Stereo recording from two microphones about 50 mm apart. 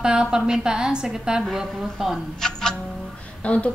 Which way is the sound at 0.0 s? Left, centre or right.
Centre.